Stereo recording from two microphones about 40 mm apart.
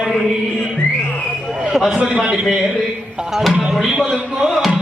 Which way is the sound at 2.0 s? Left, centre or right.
Right.